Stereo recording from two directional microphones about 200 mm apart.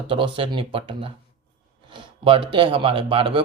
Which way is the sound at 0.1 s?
25° right (ahead or behind).